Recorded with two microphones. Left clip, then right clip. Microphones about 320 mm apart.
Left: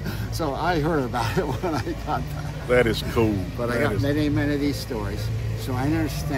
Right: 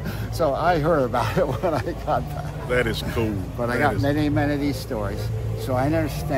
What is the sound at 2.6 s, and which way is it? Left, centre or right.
Speech, centre.